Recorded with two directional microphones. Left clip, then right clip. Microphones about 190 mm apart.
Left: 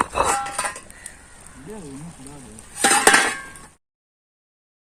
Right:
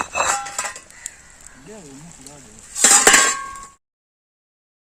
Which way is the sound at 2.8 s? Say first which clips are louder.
Right 2 dB; 30° right (ahead or behind).